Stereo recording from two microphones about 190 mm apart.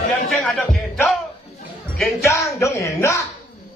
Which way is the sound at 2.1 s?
15° left (ahead or behind).